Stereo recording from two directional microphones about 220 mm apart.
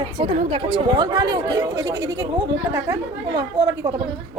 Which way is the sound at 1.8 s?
55° right (ahead or behind).